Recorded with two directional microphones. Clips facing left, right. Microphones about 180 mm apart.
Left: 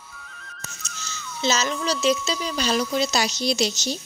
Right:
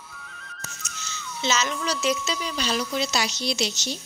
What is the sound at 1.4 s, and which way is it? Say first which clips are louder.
Speech: left 2 dB; 35° left (ahead or behind).